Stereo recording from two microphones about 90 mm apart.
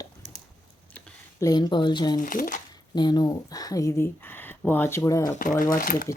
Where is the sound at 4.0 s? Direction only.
20° left (ahead or behind).